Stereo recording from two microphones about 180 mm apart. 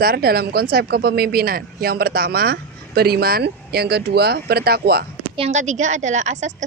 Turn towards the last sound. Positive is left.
turn(degrees=-40)  # may be behind; listen again after turning